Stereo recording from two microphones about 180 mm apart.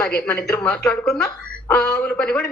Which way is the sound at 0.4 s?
10° left (ahead or behind).